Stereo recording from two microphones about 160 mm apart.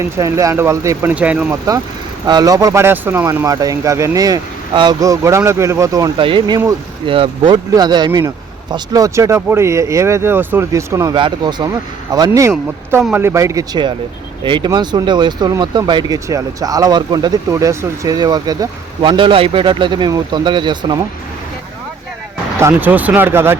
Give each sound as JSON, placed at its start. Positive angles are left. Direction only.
{"t": 0.2, "sound": "speech", "side_deg": -20}
{"t": 1.1, "sound": "speech", "side_deg": -10}
{"t": 2.2, "sound": "speech", "side_deg": -25}
{"t": 13.0, "sound": "speech", "side_deg": -5}
{"t": 13.2, "sound": "speech", "side_deg": -20}
{"t": 22.5, "sound": "speech", "side_deg": -15}